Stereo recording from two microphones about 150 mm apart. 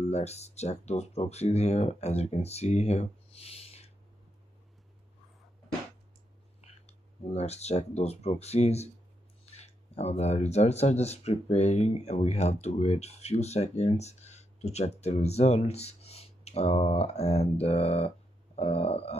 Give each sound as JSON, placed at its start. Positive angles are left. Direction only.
{"t": 0.1, "sound": "speech", "side_deg": 45}
{"t": 6.6, "sound": "speech", "side_deg": 45}